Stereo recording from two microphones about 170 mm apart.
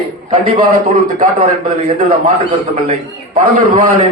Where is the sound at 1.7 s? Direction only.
35° right (ahead or behind).